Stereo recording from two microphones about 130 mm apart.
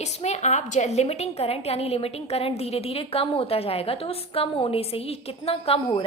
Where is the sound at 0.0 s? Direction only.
60° left (ahead or behind).